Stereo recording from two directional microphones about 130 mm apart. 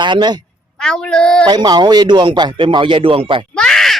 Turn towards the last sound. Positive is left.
turn(degrees=5)  # may be behind; listen again after turning